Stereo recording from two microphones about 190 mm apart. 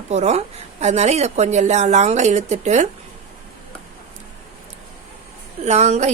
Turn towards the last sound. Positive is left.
turn(degrees=-35)  # may be behind; listen again after turning